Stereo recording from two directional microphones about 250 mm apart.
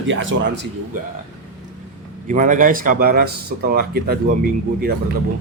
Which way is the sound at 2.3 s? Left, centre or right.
Right.